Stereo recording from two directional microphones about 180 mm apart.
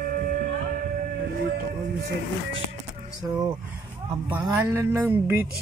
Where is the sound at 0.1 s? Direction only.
50° right (ahead or behind).